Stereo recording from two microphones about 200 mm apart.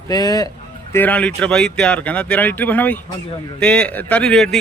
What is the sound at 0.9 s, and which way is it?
A man's voice, 10° left (ahead or behind).